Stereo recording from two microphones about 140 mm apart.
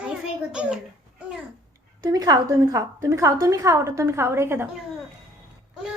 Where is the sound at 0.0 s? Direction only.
5° right (ahead or behind).